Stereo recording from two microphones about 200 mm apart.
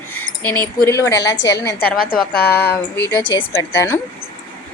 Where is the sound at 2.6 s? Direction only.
55° left (ahead or behind).